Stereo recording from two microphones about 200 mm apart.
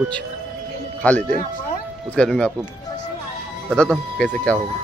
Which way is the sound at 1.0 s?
5° left (ahead or behind).